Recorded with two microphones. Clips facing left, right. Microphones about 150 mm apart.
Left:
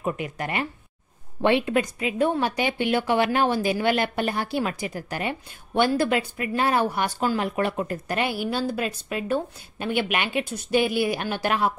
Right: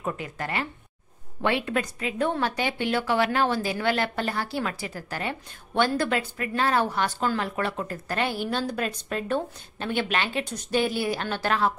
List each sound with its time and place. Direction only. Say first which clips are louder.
0.0 s a woman's voice: left 3 dB; 15° left (ahead or behind)